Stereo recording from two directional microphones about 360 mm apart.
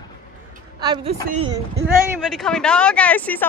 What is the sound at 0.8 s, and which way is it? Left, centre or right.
Speech, centre.